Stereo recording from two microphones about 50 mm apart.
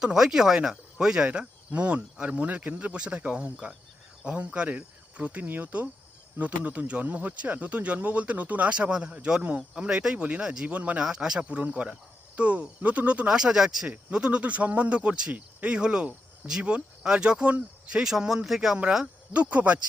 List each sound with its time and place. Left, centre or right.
0.0 s speech: centre
1.3 s speech: right
5.4 s speech: right
8.7 s speech: centre
10.2 s speech: right
10.4 s speech: centre
10.7 s speech: right
11.0 s speech: centre
11.4 s speech: right
13.2 s speech: centre
13.8 s speech: right
17.9 s speech: centre
19.3 s speech: right